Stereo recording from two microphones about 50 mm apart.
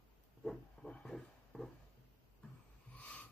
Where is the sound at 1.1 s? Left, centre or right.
Centre.